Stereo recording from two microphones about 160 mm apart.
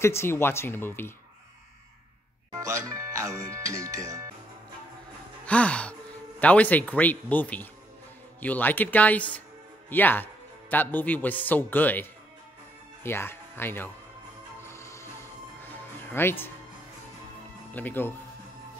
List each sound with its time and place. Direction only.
0.0 s speech: 15° left (ahead or behind)
2.5 s music: 20° right (ahead or behind)
3.6 s speech: 20° right (ahead or behind)
5.5 s speech: 10° left (ahead or behind)
14.6 s music: 15° left (ahead or behind)
17.7 s speech: 10° left (ahead or behind)